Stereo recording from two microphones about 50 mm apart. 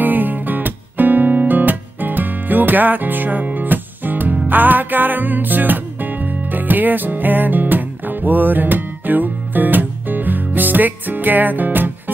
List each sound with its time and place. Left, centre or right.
0.0 s music: right